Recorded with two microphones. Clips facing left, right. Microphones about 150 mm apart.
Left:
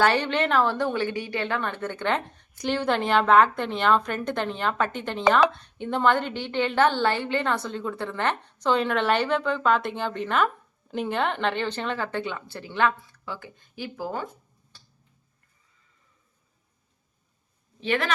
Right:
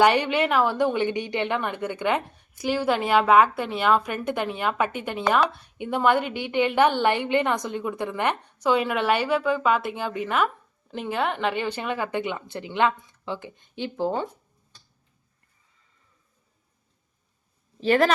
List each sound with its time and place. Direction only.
0.0 s a woman's voice: 15° right (ahead or behind)
17.7 s speech: 40° right (ahead or behind)